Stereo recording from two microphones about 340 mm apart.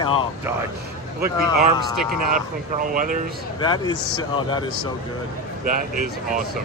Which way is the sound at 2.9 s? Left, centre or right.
Right.